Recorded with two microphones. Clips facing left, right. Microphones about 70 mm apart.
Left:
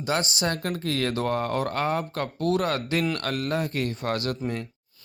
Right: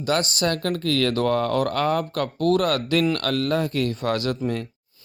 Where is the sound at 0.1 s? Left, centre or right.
Right.